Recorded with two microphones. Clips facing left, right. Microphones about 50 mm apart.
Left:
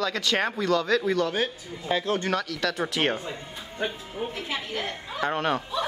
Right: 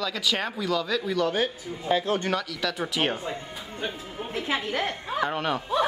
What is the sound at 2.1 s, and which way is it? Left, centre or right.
Speech, right.